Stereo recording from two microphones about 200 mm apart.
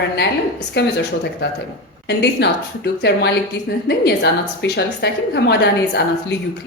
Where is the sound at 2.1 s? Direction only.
55° left (ahead or behind).